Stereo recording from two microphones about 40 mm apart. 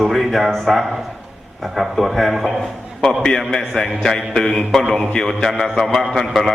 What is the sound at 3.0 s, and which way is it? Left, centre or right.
Mantra, centre.